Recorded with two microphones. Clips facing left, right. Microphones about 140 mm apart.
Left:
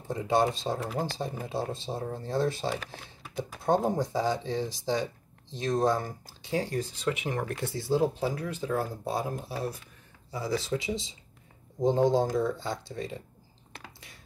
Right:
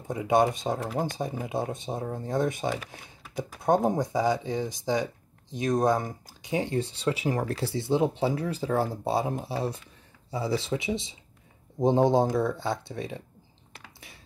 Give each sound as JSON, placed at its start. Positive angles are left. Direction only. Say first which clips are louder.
{"t": 0.1, "sound": "speech", "louder": "right 3 dB", "side_deg": -15}
{"t": 12.4, "sound": "speech", "louder": "right 1 dB", "side_deg": -60}
{"t": 12.8, "sound": "speech", "louder": "right 1 dB", "side_deg": -25}